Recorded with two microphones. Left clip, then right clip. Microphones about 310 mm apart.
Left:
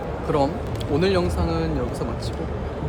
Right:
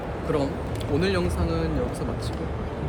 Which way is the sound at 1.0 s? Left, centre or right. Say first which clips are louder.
Left 5 dB; centre.